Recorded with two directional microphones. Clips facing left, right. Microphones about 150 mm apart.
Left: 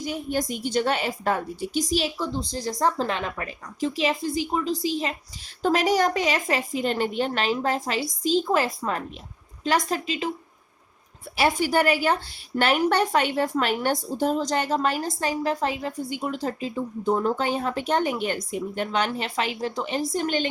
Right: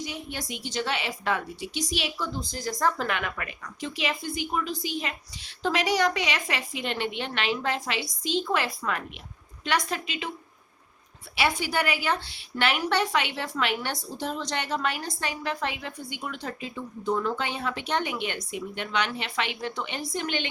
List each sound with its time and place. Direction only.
0.0 s a woman's voice: 45° left (ahead or behind)
5.6 s a woman's voice: 45° left (ahead or behind)
11.3 s a woman's voice: 45° left (ahead or behind)